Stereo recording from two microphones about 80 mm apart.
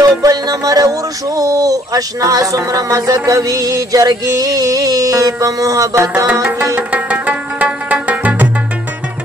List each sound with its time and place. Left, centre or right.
0.2 s music: right
5.9 s music: right
6.7 s music: centre